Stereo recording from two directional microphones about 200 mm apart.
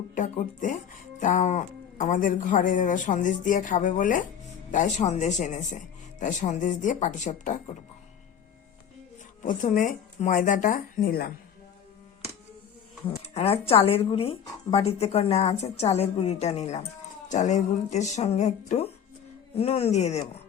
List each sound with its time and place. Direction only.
0.1 s a sound: 40° left (ahead or behind)
1.2 s a woman's voice: 40° left (ahead or behind)
9.6 s a woman's voice: 40° left (ahead or behind)
13.1 s a woman's voice: 30° left (ahead or behind)